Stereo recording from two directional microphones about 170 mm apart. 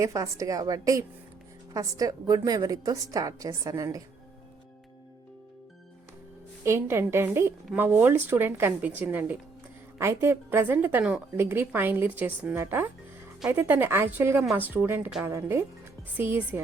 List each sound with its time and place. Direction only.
0.0 s a woman's voice: 20° right (ahead or behind)
6.7 s a woman's voice: 15° right (ahead or behind)